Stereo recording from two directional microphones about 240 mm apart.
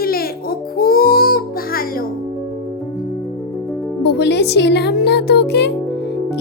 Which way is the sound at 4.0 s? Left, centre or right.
Left.